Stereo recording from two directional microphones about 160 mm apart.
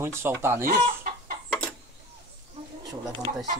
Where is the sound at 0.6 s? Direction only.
55° right (ahead or behind).